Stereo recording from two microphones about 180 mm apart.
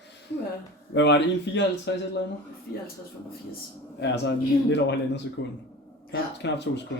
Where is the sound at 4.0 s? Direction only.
75° left (ahead or behind).